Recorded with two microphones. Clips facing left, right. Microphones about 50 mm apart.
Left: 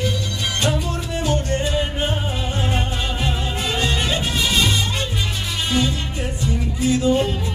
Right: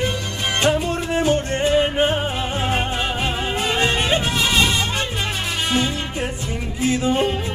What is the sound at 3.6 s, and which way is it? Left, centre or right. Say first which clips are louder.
Music: right 2 dB; right.